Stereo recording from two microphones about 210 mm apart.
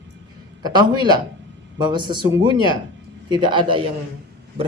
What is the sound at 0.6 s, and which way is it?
Speech, 20° right (ahead or behind).